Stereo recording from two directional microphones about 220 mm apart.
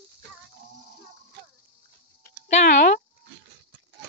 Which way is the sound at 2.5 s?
30° left (ahead or behind).